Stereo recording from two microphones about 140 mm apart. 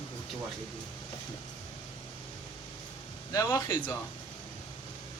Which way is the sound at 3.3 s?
25° left (ahead or behind).